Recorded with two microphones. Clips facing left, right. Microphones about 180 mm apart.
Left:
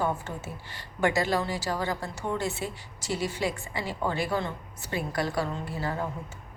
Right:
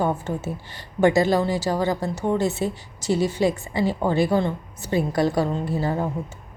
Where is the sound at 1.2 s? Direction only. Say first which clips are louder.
Right 7 dB; 40° right (ahead or behind).